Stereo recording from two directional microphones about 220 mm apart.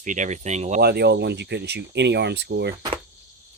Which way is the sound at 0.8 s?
45° right (ahead or behind).